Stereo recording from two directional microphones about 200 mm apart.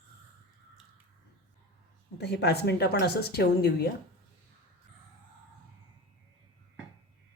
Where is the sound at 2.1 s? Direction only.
55° left (ahead or behind).